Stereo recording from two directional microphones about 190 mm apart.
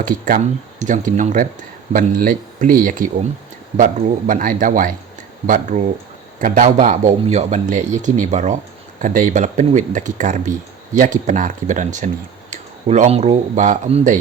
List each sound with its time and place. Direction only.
0.0 s speech: 45° right (ahead or behind)